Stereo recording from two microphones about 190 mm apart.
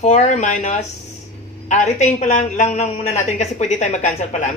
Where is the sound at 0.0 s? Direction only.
40° left (ahead or behind).